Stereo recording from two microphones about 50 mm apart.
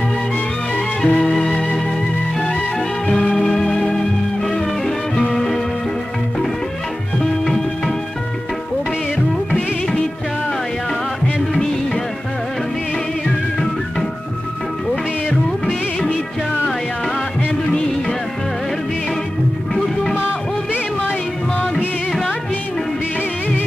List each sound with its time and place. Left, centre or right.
1.0 s music: left
3.1 s music: left
3.3 s music: centre
7.2 s music: centre
15.2 s music of bollywood: centre
19.7 s music: centre